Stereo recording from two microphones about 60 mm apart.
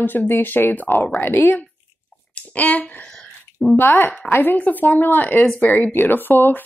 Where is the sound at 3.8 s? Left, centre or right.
Left.